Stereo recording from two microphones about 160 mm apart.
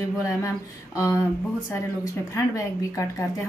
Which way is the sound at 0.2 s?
20° left (ahead or behind).